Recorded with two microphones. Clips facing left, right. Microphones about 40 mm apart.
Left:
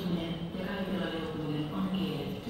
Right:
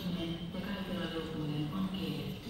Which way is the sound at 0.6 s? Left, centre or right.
Centre.